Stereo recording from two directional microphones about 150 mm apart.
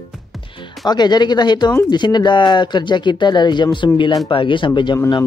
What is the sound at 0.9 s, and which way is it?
Speech, 30° left (ahead or behind).